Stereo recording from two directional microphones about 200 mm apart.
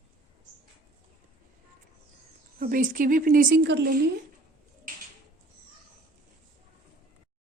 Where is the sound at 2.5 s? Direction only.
45° right (ahead or behind).